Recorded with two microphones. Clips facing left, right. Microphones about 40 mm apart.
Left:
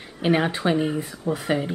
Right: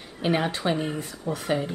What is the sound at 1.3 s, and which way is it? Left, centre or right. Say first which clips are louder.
Speech: left 2 dB; centre.